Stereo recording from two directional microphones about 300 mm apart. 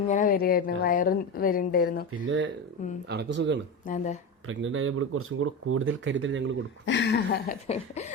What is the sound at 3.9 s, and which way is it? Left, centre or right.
Speech, left.